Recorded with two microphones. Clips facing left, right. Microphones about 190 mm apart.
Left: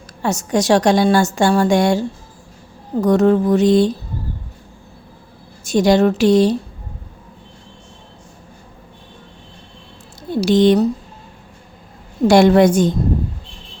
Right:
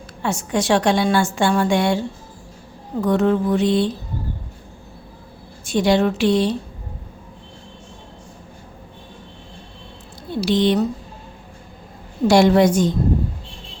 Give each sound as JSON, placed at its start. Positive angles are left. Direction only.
{"t": 0.2, "sound": "a woman's voice", "side_deg": 40}
{"t": 5.6, "sound": "a woman's voice", "side_deg": 40}
{"t": 10.4, "sound": "a woman's voice", "side_deg": 45}
{"t": 12.3, "sound": "a woman's voice", "side_deg": 55}